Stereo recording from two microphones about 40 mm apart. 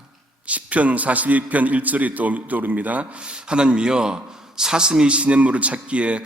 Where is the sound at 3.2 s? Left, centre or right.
Right.